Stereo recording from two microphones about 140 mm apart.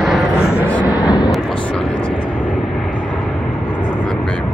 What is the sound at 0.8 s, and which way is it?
Vehicle, 30° left (ahead or behind).